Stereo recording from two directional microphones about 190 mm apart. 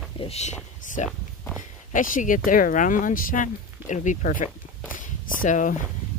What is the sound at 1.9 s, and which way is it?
Speech, 45° left (ahead or behind).